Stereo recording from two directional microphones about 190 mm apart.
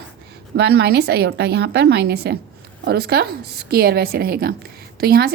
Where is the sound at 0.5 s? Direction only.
60° right (ahead or behind).